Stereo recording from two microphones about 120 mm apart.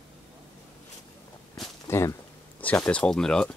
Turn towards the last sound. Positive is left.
turn(degrees=5)  # may be behind; listen again after turning